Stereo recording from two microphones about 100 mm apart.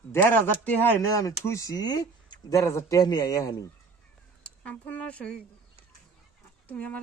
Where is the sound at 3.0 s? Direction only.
40° left (ahead or behind).